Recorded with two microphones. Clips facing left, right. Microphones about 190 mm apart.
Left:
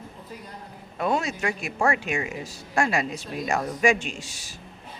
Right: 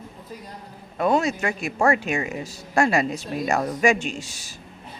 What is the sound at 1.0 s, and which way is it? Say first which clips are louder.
Speech: right 4 dB; 45° right (ahead or behind).